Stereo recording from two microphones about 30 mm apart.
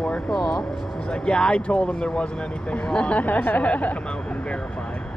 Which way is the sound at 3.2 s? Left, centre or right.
Left.